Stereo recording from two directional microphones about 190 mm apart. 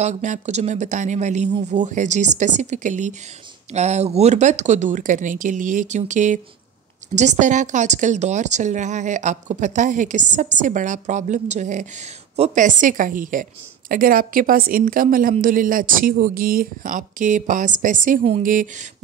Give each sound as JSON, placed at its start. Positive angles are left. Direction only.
{"t": 0.0, "sound": "a woman's voice", "side_deg": -40}